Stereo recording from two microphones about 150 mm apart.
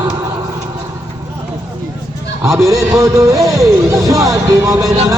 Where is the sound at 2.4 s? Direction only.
20° right (ahead or behind).